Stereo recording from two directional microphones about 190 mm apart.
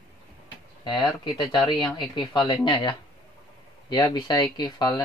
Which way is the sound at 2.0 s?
25° left (ahead or behind).